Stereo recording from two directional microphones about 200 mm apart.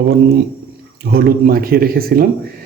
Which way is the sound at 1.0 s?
50° right (ahead or behind).